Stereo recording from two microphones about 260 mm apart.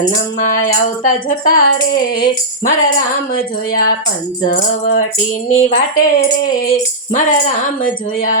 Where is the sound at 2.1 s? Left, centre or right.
Left.